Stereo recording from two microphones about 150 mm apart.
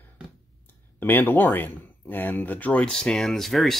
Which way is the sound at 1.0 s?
15° left (ahead or behind).